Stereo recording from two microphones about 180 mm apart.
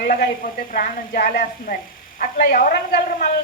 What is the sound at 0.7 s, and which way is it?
A woman's voice, 55° left (ahead or behind).